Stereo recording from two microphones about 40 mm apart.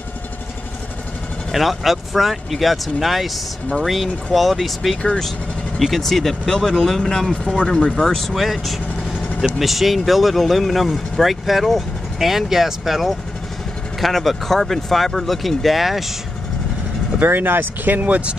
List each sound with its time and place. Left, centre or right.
1.5 s speech: centre
8.3 s speech: centre
17.2 s speech: right